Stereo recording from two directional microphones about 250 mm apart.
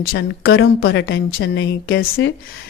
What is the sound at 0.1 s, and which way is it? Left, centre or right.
A woman's voice, left.